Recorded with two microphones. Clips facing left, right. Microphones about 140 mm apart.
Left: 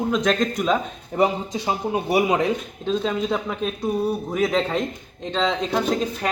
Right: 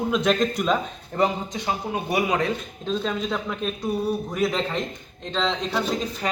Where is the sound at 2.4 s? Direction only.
5° left (ahead or behind).